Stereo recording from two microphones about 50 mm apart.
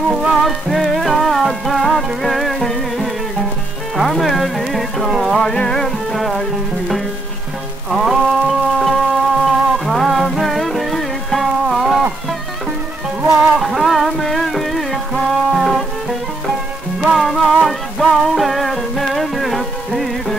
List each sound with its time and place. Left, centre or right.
0.1 s music: centre
0.4 s music: centre
5.6 s music: centre
7.9 s music: centre
11.6 s a sound: centre
13.2 s music: right
13.6 s music: centre
17.2 s music: centre